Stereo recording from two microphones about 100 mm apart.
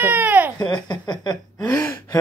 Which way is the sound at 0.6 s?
45° left (ahead or behind).